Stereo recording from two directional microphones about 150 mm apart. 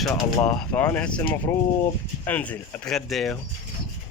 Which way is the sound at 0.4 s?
10° left (ahead or behind).